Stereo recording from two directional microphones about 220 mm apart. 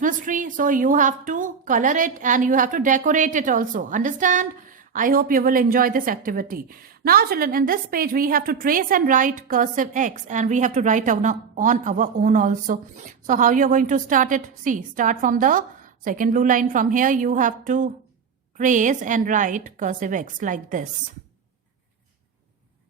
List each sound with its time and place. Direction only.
0.0 s a woman's voice: 35° right (ahead or behind)